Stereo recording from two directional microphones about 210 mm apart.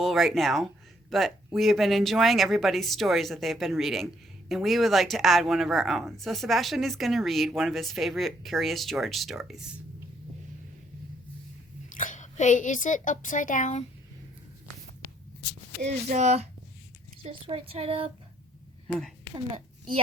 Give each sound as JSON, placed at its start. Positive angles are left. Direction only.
{"t": 0.0, "sound": "speech", "side_deg": 0}
{"t": 11.9, "sound": "a woman's voice", "side_deg": 40}
{"t": 15.9, "sound": "speech", "side_deg": -35}
{"t": 18.9, "sound": "speech", "side_deg": 0}